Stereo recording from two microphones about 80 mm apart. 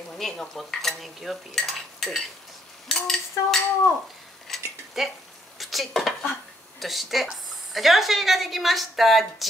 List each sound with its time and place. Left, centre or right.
0.2 s a woman's voice: centre
2.9 s cutlery: centre
5.6 s a woman's voice: centre